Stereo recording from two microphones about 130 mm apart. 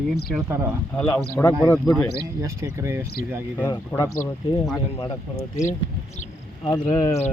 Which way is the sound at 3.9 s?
20° left (ahead or behind).